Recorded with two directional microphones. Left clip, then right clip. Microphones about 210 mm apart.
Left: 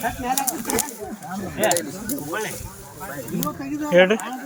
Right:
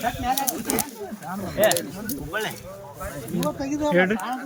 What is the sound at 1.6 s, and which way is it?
Speech, 10° right (ahead or behind).